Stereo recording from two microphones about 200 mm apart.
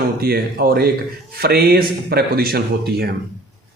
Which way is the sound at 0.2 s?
50° right (ahead or behind).